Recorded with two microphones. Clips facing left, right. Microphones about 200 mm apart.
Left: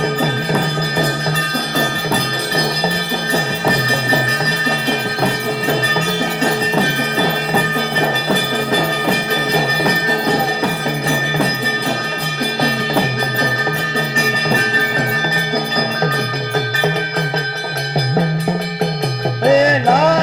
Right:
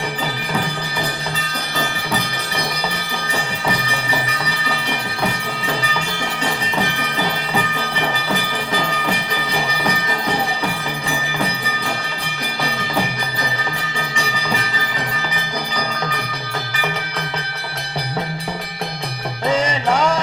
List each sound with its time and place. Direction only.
7.9 s music: 40° left (ahead or behind)
19.5 s music: 40° left (ahead or behind)